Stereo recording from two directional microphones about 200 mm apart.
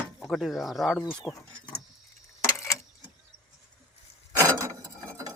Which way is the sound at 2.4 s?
15° left (ahead or behind).